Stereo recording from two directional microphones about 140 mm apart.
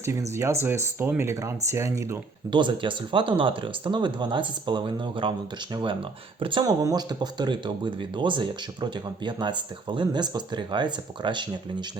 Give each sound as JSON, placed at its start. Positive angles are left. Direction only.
{"t": 0.0, "sound": "speech", "side_deg": -20}
{"t": 2.5, "sound": "speech", "side_deg": -35}